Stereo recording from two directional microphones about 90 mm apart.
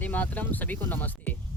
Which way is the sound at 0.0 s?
20° left (ahead or behind).